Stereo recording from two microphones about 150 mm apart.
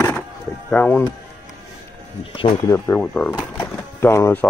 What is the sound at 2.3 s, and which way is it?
Speech, 35° left (ahead or behind).